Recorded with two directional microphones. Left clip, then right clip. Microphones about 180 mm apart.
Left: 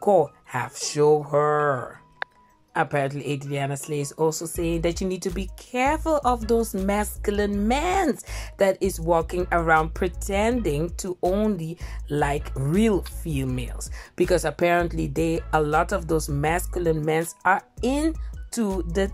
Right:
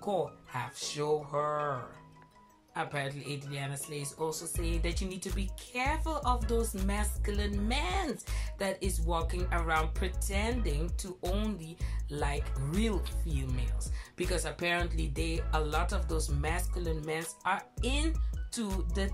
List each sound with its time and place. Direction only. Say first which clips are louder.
0.0 s speech: left 14 dB; 55° left (ahead or behind)
12.4 s speech: left 12 dB; centre (ahead or behind)
12.8 s speech: left 12 dB; 60° left (ahead or behind)